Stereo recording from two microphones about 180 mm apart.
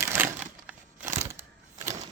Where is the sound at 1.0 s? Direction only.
40° right (ahead or behind).